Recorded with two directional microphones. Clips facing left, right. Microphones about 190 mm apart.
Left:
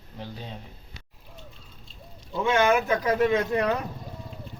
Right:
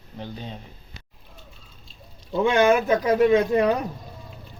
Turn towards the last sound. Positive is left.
turn(degrees=-15)  # may be behind; listen again after turning